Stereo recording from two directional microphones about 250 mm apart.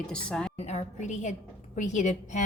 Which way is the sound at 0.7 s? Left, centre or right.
Left.